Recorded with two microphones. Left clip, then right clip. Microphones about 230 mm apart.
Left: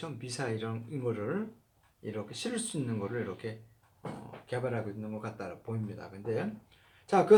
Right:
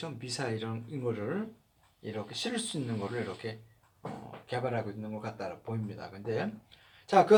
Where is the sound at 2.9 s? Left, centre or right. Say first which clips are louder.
Even; right.